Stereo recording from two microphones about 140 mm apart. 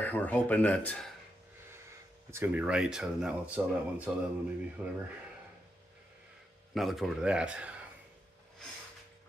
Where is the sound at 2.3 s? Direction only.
15° right (ahead or behind).